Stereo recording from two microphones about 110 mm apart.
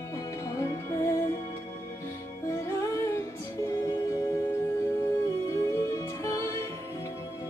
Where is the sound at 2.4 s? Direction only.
30° left (ahead or behind).